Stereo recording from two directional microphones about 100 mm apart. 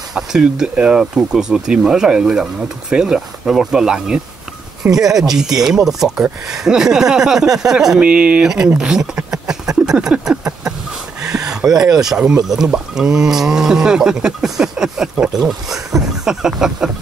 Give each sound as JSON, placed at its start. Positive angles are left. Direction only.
{"t": 0.1, "sound": "speech", "side_deg": -5}